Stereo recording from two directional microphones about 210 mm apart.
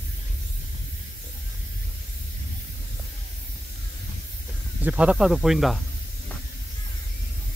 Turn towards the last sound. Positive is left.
turn(degrees=0)  # may be behind; listen again after turning